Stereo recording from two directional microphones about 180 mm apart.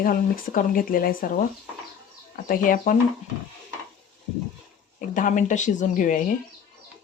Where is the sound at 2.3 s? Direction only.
50° left (ahead or behind).